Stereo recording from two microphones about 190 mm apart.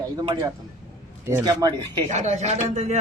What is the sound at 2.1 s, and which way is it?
Speech, 35° right (ahead or behind).